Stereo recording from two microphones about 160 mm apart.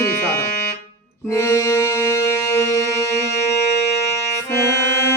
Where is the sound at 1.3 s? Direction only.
20° left (ahead or behind).